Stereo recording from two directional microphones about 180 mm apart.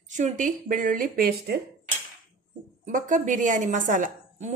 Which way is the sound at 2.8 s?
45° right (ahead or behind).